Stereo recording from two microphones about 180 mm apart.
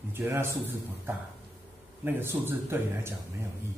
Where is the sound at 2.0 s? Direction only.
10° right (ahead or behind).